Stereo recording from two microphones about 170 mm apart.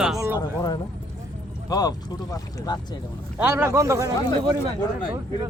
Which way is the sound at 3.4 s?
15° right (ahead or behind).